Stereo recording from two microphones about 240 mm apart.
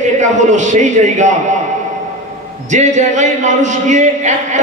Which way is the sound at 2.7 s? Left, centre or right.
Right.